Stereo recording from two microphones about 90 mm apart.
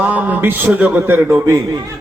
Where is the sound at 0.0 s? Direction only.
20° right (ahead or behind).